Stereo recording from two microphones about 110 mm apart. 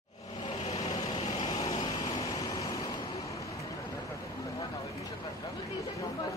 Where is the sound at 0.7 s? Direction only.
70° left (ahead or behind).